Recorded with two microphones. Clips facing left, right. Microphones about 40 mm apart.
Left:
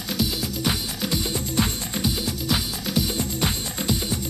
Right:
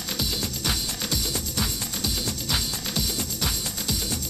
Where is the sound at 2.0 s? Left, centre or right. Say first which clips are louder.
Left 4 dB; centre.